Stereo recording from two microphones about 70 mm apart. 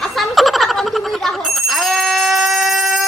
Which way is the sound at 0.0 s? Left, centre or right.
Centre.